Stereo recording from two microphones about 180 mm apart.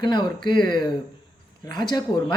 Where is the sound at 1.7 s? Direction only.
25° left (ahead or behind).